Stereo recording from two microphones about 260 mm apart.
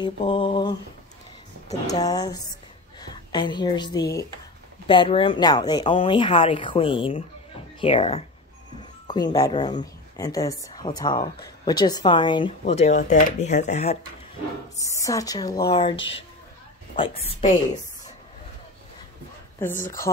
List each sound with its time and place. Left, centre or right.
0.0 s a woman's voice: centre
1.9 s a woman's voice: centre
14.8 s a woman's voice: centre
16.0 s speech: left
16.9 s speech: left